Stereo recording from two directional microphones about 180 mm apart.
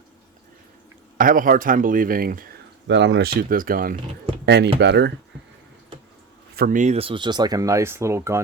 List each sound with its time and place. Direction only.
1.2 s speech: 50° right (ahead or behind)
2.8 s speech: 80° right; by 3.9 s 55° right (ahead or behind)
4.4 s speech: 70° right (ahead or behind)
6.6 s speech: 45° right (ahead or behind); by 8.4 s 15° right (ahead or behind)